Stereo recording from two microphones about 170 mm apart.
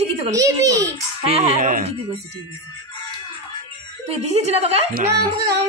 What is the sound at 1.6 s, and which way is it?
Speech, 50° right (ahead or behind).